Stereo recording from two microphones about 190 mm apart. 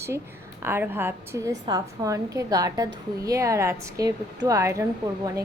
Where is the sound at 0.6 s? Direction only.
10° right (ahead or behind).